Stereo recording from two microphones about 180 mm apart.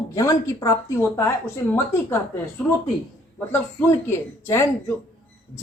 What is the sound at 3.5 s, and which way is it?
A woman's voice, 10° left (ahead or behind).